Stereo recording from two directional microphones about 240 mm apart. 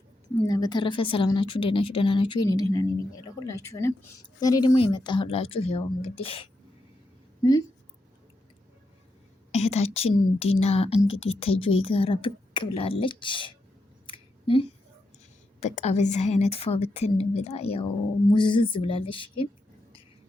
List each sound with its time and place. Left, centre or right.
0.4 s a woman's voice: centre
9.5 s a woman's voice: left
14.1 s a sound: left
15.6 s a woman's voice: left